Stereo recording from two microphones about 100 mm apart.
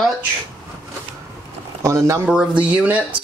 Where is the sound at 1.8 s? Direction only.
30° right (ahead or behind).